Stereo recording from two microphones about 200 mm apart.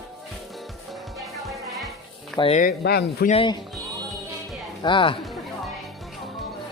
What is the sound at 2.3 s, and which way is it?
Speech, 30° left (ahead or behind).